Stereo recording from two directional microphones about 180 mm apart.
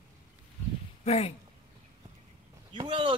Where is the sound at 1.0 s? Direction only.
35° left (ahead or behind).